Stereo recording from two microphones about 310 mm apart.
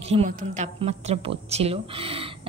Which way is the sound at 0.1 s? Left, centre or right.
Centre.